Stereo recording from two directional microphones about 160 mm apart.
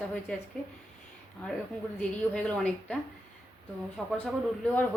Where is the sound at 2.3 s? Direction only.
5° left (ahead or behind).